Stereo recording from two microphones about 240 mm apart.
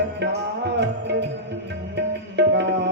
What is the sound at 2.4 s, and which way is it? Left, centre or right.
Tabla, right.